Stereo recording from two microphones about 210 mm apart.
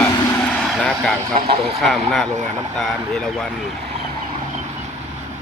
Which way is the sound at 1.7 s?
Centre (ahead or behind).